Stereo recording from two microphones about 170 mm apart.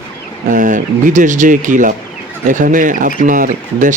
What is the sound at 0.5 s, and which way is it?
Speech, 50° right (ahead or behind).